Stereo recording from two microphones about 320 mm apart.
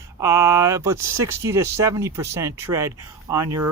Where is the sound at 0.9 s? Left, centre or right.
Right.